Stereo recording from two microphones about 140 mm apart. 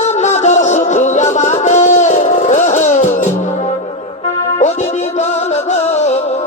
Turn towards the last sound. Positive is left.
turn(degrees=50)  # may be behind; listen again after turning